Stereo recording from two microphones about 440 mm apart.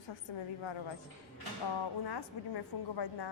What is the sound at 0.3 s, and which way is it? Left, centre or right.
Speech, left.